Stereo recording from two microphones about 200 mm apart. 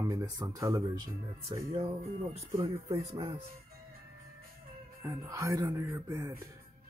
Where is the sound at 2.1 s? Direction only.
30° right (ahead or behind).